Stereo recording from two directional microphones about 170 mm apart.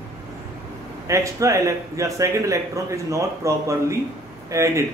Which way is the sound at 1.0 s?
20° right (ahead or behind).